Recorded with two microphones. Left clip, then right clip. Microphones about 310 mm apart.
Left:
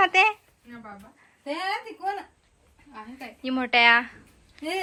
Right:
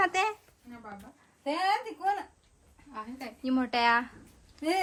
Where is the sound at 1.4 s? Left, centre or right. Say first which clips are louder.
Right 1 dB; centre.